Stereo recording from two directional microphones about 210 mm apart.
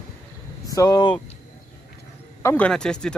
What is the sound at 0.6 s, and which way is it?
Speech, 15° left (ahead or behind).